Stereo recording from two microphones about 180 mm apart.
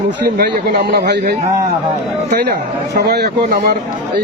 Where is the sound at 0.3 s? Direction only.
60° right (ahead or behind).